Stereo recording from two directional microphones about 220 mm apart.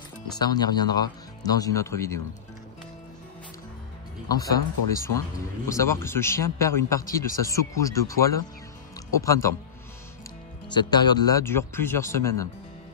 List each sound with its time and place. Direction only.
0.4 s speech: 15° left (ahead or behind)
4.3 s speech: 15° left (ahead or behind)
5.7 s speech: 15° left (ahead or behind)
10.7 s speech: 20° left (ahead or behind)